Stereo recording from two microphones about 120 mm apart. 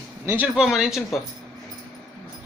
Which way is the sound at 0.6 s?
5° right (ahead or behind).